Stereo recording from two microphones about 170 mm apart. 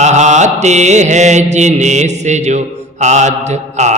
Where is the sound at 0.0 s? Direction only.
45° right (ahead or behind).